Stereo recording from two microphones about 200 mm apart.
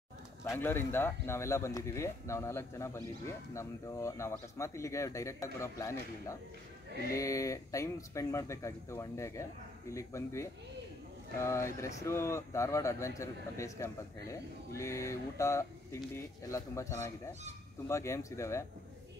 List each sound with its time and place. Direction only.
0.4 s speech: 10° left (ahead or behind)